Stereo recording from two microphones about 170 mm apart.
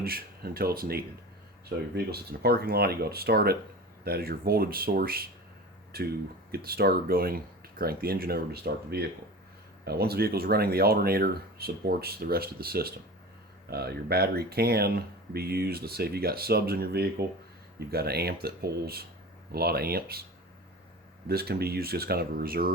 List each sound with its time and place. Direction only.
0.0 s speech: 60° right (ahead or behind)
21.2 s speech: 65° right (ahead or behind)